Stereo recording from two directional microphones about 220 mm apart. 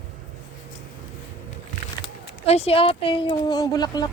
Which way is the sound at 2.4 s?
30° left (ahead or behind).